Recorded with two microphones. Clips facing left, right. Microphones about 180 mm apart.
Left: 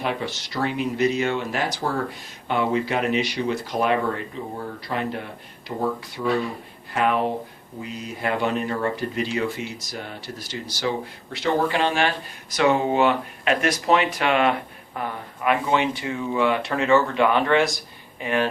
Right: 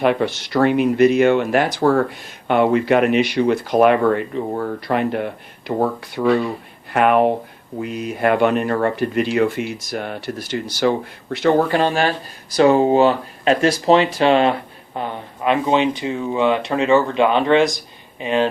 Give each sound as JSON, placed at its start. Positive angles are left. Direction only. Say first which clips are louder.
{"t": 0.0, "sound": "speech", "louder": "right 9 dB", "side_deg": -60}